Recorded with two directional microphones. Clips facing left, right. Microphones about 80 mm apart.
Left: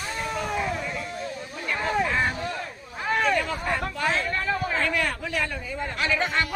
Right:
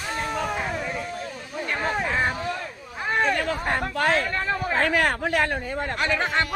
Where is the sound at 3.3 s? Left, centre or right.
Right.